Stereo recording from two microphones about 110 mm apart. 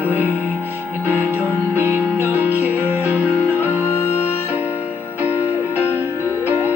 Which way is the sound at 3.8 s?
25° left (ahead or behind).